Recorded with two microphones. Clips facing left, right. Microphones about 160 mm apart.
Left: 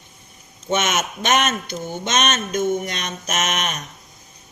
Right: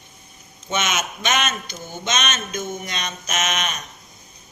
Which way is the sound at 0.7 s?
55° left (ahead or behind).